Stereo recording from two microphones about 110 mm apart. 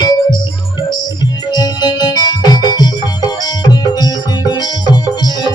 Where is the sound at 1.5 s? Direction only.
40° left (ahead or behind).